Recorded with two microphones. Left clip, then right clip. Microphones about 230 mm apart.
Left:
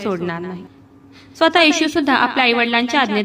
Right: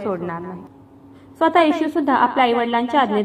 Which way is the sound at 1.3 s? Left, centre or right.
Left.